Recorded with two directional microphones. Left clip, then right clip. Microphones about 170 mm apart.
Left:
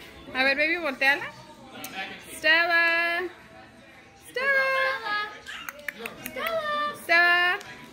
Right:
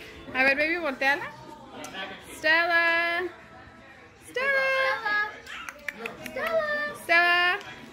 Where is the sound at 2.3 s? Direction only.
Centre (ahead or behind).